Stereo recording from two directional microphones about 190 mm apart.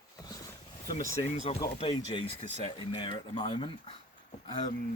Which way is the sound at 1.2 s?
35° left (ahead or behind).